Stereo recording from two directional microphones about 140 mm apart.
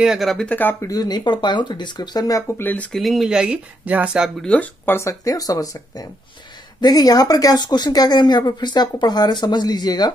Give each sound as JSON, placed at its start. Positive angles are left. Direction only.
{"t": 0.0, "sound": "speech", "side_deg": 0}
{"t": 2.6, "sound": "speech", "side_deg": 10}
{"t": 3.0, "sound": "speech", "side_deg": 0}
{"t": 4.4, "sound": "speech", "side_deg": 10}